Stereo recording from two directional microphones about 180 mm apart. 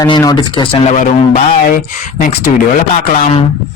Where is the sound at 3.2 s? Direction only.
35° left (ahead or behind).